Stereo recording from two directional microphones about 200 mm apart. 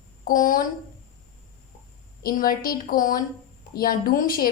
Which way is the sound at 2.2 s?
45° left (ahead or behind).